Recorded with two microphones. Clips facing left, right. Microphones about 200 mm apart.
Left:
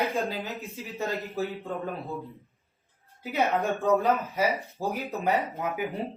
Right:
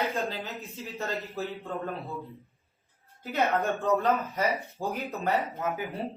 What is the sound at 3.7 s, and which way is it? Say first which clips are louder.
A man's voice: left 2 dB; centre (ahead or behind).